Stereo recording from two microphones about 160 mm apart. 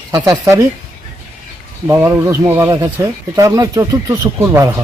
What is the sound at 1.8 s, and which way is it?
Speech, 20° right (ahead or behind).